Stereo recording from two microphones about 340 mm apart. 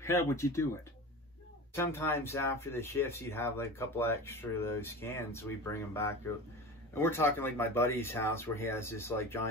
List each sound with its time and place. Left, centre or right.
0.0 s speech: centre
1.8 s speech: centre